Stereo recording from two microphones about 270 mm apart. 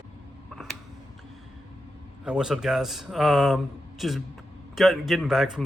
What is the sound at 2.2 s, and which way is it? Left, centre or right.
Speech, centre.